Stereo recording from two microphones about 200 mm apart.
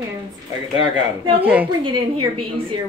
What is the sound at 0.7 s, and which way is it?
Speech, 25° right (ahead or behind).